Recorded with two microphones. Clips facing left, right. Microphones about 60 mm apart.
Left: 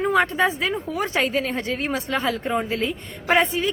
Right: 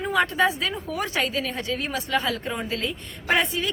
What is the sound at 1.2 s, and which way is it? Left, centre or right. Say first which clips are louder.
A woman's voice: left 5 dB; left.